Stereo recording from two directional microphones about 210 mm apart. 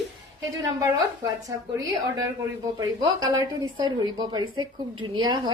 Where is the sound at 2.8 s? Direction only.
20° right (ahead or behind).